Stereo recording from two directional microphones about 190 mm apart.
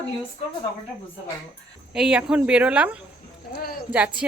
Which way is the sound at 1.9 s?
5° right (ahead or behind).